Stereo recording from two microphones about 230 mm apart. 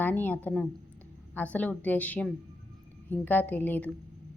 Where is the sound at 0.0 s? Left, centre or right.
Centre.